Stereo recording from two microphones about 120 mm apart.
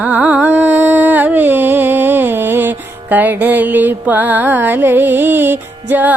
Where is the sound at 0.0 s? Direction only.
15° right (ahead or behind).